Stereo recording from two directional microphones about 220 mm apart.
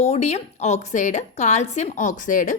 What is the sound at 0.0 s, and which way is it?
A woman's voice, 30° left (ahead or behind).